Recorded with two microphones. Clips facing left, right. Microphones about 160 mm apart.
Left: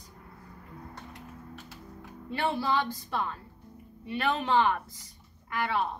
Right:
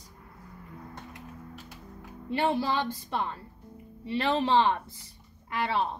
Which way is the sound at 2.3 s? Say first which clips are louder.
Right 2 dB; 20° right (ahead or behind).